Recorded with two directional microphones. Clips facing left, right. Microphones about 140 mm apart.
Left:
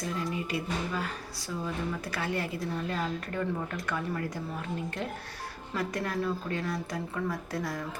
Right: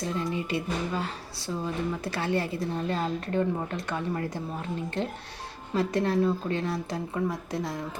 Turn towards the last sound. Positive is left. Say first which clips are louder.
# right 2 dB
turn(degrees=-20)  # may be behind; listen again after turning